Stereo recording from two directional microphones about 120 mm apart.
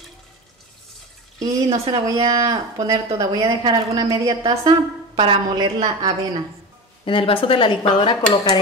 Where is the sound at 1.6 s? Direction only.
55° right (ahead or behind).